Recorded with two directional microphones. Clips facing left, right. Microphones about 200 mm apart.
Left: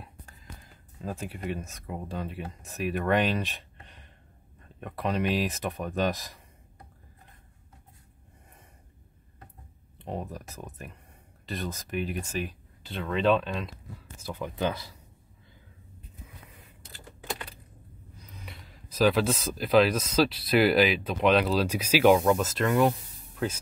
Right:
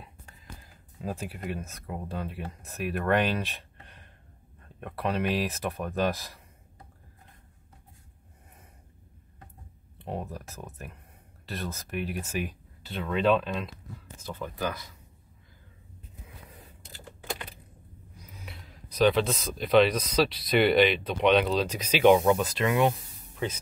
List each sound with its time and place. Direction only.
1.0 s speech: 5° right (ahead or behind)
9.9 s speech: centre (ahead or behind)
14.2 s speech: 15° left (ahead or behind)
18.1 s speech: 5° right (ahead or behind)